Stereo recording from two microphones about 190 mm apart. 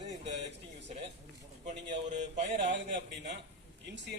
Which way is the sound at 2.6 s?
65° right (ahead or behind).